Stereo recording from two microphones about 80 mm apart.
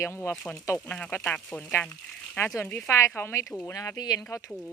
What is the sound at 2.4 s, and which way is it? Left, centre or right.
Speech, left.